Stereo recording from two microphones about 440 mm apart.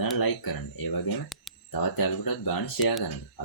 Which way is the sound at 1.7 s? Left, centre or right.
Left.